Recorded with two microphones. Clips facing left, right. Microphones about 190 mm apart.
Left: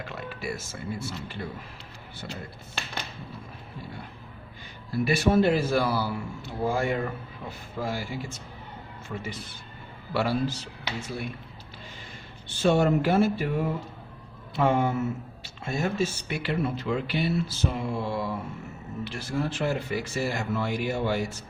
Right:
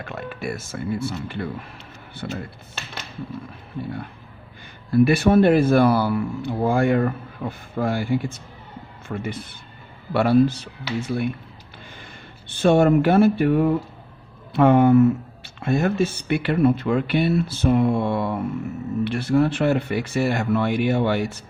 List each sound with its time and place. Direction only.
0.0 s speech: 55° right (ahead or behind)
4.9 s speech: 55° right (ahead or behind)
12.6 s speech: 55° right (ahead or behind)